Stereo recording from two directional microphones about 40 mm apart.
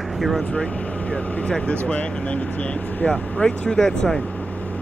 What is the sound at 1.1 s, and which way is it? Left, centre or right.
Speech, left.